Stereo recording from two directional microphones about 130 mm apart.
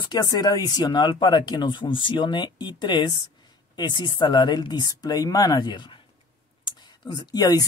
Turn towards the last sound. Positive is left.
turn(degrees=30)  # may be behind; listen again after turning